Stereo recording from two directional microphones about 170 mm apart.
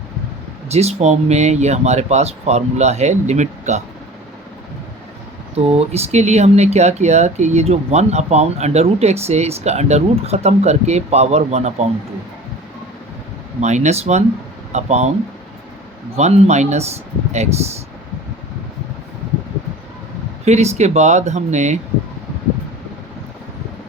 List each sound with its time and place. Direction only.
0.7 s speech: 40° right (ahead or behind)
5.5 s speech: 35° right (ahead or behind)
13.6 s speech: 45° right (ahead or behind)
16.1 s speech: 40° right (ahead or behind)
20.4 s speech: 40° right (ahead or behind)